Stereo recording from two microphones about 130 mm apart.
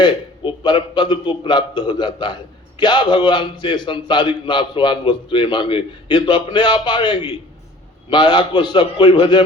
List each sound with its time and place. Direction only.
0.0 s a man's voice: 35° left (ahead or behind)